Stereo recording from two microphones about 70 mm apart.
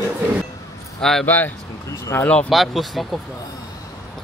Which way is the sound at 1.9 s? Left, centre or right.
Left.